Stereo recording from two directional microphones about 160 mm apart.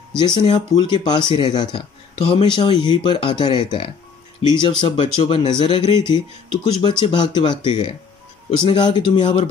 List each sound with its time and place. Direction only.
0.2 s speech: 30° left (ahead or behind)